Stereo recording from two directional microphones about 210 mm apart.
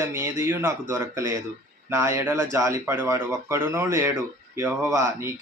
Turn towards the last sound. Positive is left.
turn(degrees=-15)  # may be behind; listen again after turning